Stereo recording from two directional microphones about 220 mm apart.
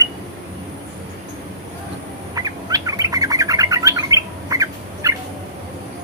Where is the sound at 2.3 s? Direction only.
15° right (ahead or behind).